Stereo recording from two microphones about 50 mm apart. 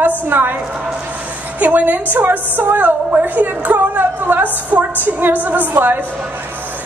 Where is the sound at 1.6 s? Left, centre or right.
Right.